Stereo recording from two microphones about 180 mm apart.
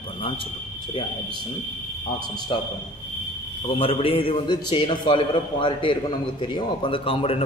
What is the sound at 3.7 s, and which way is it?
A man's voice, 30° left (ahead or behind).